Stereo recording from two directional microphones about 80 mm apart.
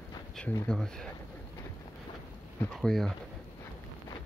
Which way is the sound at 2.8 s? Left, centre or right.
Centre.